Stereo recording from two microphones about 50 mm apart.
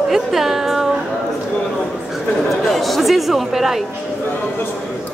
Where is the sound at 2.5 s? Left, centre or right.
Centre.